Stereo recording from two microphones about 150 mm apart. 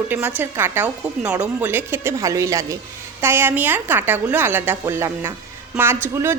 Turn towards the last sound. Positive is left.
turn(degrees=-15)  # may be behind; listen again after turning